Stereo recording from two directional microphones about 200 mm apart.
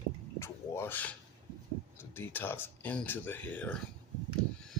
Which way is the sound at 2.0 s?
10° left (ahead or behind).